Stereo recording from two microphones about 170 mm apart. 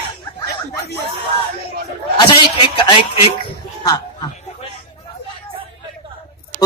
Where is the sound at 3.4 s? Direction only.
25° left (ahead or behind).